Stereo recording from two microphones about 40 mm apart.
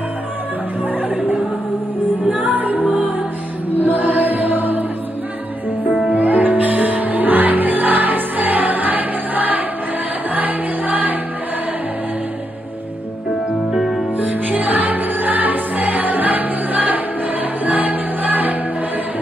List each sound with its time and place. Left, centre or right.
2.4 s music: right
3.8 s music: right
6.1 s music: right
13.7 s music: centre
14.1 s music: right